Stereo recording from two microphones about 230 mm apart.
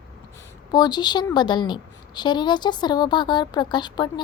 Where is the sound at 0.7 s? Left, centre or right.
Centre.